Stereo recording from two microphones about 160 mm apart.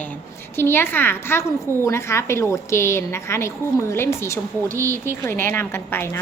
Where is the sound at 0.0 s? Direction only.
10° left (ahead or behind).